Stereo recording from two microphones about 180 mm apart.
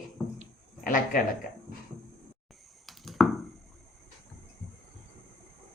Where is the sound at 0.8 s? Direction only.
50° left (ahead or behind).